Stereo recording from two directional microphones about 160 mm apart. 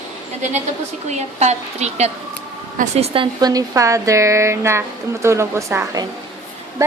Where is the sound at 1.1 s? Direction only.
45° right (ahead or behind); by 6.0 s 20° right (ahead or behind).